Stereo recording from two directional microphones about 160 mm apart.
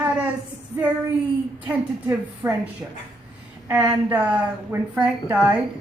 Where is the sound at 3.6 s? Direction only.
10° right (ahead or behind).